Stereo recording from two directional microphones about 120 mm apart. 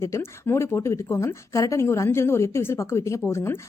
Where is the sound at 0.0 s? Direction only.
20° left (ahead or behind).